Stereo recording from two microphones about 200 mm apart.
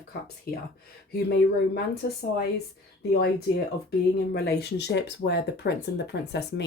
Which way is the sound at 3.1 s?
50° left (ahead or behind).